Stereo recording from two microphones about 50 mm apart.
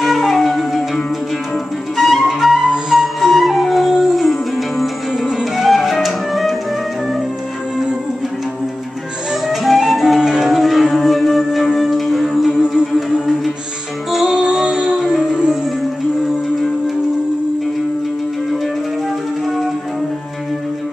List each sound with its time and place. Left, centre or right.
0.0 s music: centre
2.0 s flute: centre
2.9 s music: centre
9.5 s music: centre
14.1 s music: centre